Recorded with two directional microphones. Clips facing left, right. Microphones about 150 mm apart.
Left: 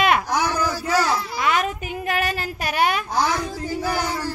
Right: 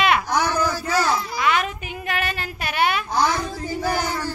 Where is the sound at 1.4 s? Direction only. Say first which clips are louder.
Even; 40° left (ahead or behind).